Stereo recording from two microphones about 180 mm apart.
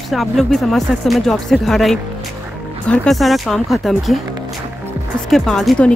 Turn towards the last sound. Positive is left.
turn(degrees=0)  # may be behind; listen again after turning